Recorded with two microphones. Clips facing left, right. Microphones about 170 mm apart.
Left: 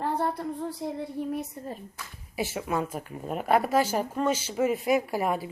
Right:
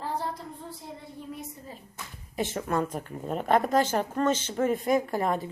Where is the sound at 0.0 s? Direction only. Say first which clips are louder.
Left 5 dB; 60° left (ahead or behind).